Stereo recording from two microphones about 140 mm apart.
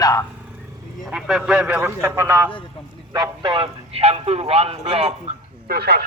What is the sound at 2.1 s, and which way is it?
Speech, 20° right (ahead or behind).